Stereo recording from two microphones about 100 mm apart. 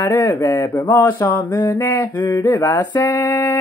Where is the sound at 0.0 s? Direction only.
25° left (ahead or behind).